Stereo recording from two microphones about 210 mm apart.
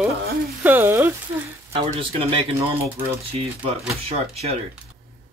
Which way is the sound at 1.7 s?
25° right (ahead or behind).